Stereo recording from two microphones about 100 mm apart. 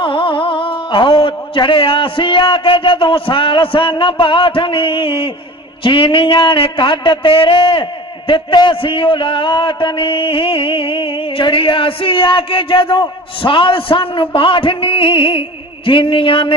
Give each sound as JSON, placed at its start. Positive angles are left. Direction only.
{"t": 0.0, "sound": "a man's voice", "side_deg": 55}